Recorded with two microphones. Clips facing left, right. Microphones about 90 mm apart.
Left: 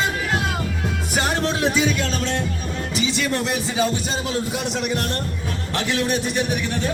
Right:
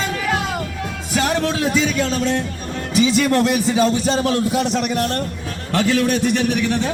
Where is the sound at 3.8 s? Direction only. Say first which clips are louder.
Right 4 dB; 70° right (ahead or behind).